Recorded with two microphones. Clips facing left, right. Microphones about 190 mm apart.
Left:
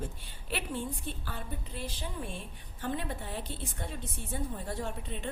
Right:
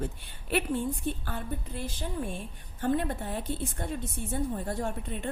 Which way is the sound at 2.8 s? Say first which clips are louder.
Right 7 dB; 50° right (ahead or behind).